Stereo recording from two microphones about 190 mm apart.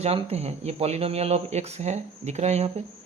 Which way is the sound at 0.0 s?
35° right (ahead or behind).